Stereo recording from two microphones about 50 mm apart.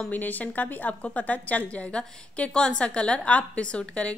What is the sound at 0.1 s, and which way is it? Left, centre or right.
A woman's voice, left.